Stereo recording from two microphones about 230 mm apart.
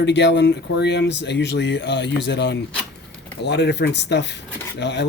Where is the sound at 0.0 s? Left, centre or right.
Left.